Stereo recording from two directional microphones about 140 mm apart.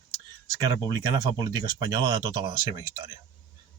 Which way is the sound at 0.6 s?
30° right (ahead or behind).